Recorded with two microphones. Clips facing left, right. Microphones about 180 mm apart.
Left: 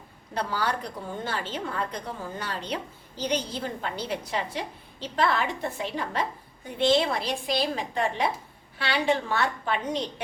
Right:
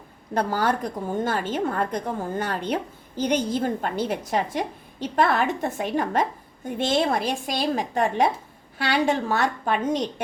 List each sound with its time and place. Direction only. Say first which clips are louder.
0.3 s a woman's voice: right 6 dB; 50° right (ahead or behind)